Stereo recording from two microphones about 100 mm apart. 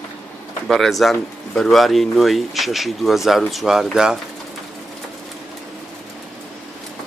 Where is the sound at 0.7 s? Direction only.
Centre (ahead or behind).